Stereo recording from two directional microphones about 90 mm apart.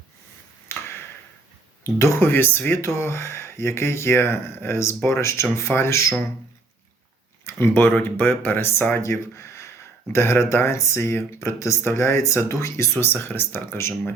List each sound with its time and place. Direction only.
0.7 s a sound: 30° left (ahead or behind)
1.8 s speech: 35° left (ahead or behind)
7.4 s speech: 25° left (ahead or behind)